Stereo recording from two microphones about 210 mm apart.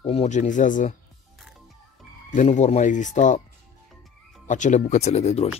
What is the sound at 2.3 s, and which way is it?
Speech, 35° left (ahead or behind).